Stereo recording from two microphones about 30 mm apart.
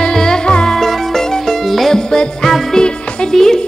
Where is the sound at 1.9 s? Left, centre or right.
Left.